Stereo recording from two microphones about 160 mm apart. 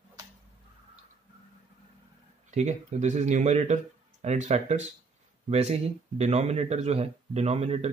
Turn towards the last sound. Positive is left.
turn(degrees=-40)  # may be behind; listen again after turning